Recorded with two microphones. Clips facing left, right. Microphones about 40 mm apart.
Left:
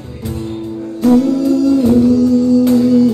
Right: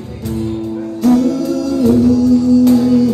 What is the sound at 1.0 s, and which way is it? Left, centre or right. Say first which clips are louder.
Music: left 2 dB; left.